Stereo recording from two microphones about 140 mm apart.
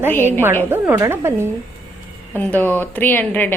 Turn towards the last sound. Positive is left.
turn(degrees=15)  # may be behind; listen again after turning